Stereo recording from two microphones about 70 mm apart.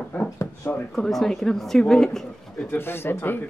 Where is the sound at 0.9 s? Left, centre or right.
Centre.